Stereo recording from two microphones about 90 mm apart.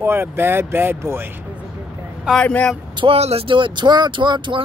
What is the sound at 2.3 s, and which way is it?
Speech, 10° left (ahead or behind).